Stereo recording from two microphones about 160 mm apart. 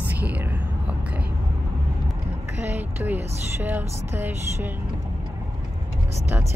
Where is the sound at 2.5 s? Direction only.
10° right (ahead or behind).